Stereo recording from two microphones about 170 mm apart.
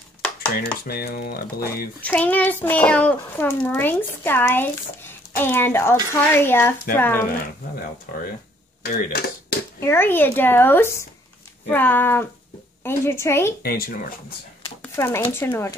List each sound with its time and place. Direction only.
0.8 s speech: 65° left (ahead or behind)
2.0 s a child's voice: 10° left (ahead or behind)
8.8 s speech: 65° left (ahead or behind)
9.8 s a child's voice: 15° left (ahead or behind)
13.6 s speech: 65° left (ahead or behind)
14.8 s a sound: 15° left (ahead or behind)
15.3 s a child's voice: 15° left (ahead or behind)